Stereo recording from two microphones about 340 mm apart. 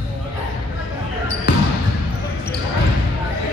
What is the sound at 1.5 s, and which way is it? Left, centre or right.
Basketball bounce, left.